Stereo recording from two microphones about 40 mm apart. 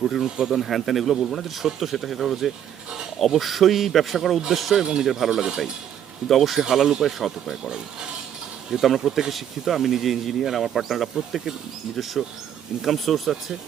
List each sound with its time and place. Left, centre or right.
0.0 s speech: centre
0.3 s speech: centre
0.5 s speech: centre
6.2 s speech: centre
7.6 s speech: centre